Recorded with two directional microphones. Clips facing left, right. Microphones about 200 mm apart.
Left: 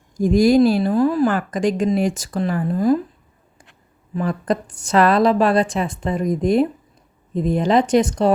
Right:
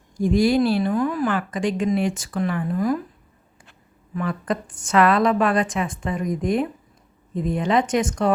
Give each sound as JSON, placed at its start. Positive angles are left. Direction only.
{"t": 0.2, "sound": "a woman's voice", "side_deg": 40}
{"t": 4.2, "sound": "a woman's voice", "side_deg": 35}